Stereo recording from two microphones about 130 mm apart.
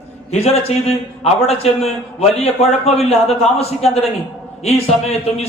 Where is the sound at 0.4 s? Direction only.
50° left (ahead or behind).